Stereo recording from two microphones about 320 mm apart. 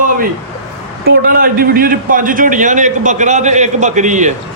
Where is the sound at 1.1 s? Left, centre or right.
Right.